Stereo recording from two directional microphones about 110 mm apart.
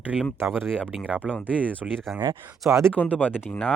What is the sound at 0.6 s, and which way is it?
Speech, 10° left (ahead or behind).